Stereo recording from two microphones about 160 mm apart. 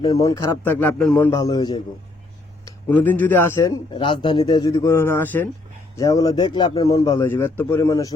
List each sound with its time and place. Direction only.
0.3 s a man's voice: 20° left (ahead or behind)
1.4 s a man's voice: 25° left (ahead or behind)
2.9 s a man's voice: 10° left (ahead or behind)
3.9 s a man's voice: 30° left (ahead or behind)